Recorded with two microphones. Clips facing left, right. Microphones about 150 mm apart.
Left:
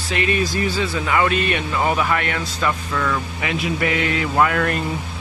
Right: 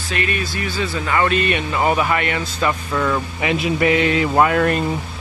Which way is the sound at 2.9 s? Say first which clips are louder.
Right 3 dB; 20° right (ahead or behind).